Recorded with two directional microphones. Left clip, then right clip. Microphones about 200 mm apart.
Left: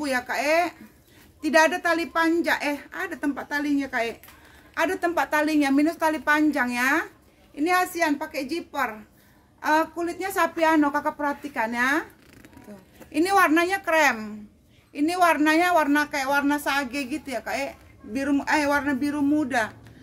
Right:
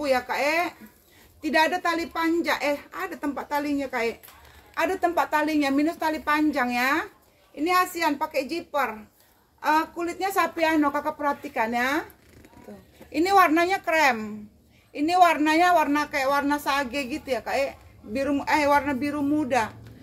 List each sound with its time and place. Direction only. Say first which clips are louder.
0.0 s a woman's voice: right 2 dB; 15° left (ahead or behind)
13.1 s a woman's voice: right 1 dB; 20° left (ahead or behind)